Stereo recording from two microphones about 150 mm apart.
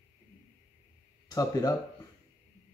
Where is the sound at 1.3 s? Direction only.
25° left (ahead or behind).